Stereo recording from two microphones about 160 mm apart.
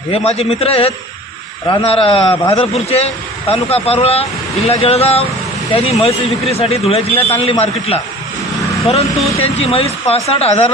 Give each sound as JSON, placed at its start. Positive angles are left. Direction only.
{"t": 0.1, "sound": "a man's voice", "side_deg": 40}